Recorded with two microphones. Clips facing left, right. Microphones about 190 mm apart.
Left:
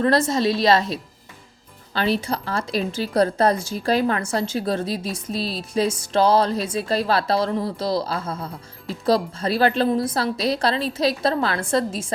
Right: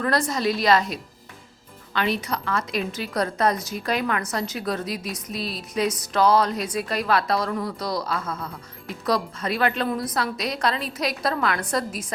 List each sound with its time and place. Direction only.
0.0 s a woman's voice: 25° left (ahead or behind)